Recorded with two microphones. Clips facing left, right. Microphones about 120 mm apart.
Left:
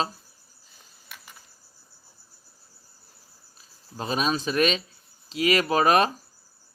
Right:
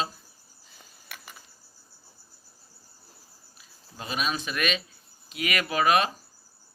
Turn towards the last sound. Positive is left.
turn(degrees=40)  # may be behind; listen again after turning